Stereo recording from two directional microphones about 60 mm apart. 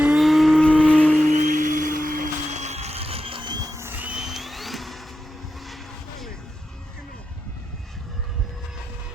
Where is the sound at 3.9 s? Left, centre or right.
Right.